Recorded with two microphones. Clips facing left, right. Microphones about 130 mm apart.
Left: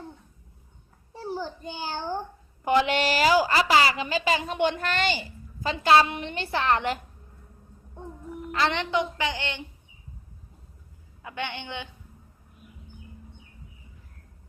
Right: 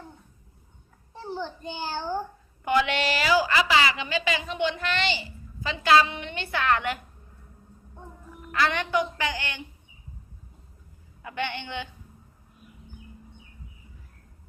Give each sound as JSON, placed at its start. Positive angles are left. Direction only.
{"t": 1.2, "sound": "a child's voice", "side_deg": 10}
{"t": 2.6, "sound": "a woman's voice", "side_deg": 35}
{"t": 8.5, "sound": "a woman's voice", "side_deg": 25}
{"t": 11.2, "sound": "a woman's voice", "side_deg": 15}